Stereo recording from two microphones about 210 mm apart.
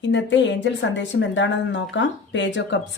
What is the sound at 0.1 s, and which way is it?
A woman's voice, 60° left (ahead or behind).